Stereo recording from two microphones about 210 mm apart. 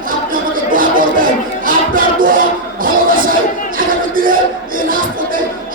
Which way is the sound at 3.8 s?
40° right (ahead or behind).